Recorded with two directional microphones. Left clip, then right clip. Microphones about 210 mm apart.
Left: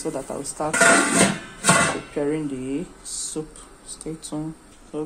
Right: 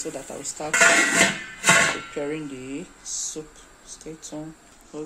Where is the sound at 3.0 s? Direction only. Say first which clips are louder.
Right 2 dB; 40° left (ahead or behind).